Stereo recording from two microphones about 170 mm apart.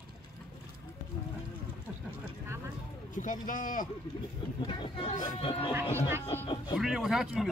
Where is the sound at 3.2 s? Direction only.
50° left (ahead or behind).